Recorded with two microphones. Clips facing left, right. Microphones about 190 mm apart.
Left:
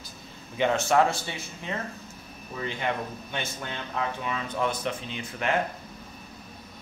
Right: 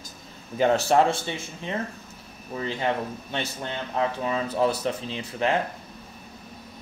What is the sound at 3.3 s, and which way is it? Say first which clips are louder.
Speech: right 3 dB; 30° right (ahead or behind).